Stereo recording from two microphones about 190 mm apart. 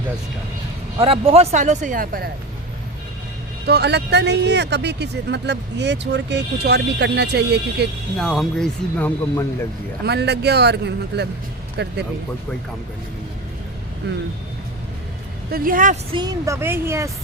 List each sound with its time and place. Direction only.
0.9 s speech: 30° right (ahead or behind); by 2.3 s 50° right (ahead or behind)
3.7 s speech: 60° right (ahead or behind)
8.2 s speech: centre (ahead or behind)
10.0 s speech: 60° right (ahead or behind)
15.5 s a woman's voice: 45° right (ahead or behind)
16.1 s a woman's voice: 20° right (ahead or behind)